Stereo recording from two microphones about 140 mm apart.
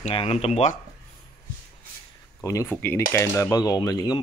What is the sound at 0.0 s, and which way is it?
Speech, 45° left (ahead or behind).